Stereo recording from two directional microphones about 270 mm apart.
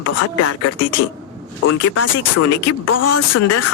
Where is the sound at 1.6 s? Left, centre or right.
Left.